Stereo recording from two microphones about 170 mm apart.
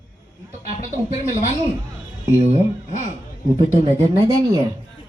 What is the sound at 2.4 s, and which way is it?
Speech, 40° right (ahead or behind).